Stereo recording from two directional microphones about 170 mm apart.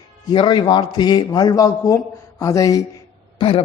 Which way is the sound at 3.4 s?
35° left (ahead or behind).